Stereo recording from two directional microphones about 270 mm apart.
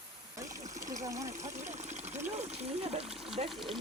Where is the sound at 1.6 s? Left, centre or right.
Right.